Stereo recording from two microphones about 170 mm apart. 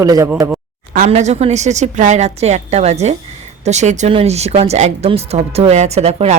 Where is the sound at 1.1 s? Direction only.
40° right (ahead or behind).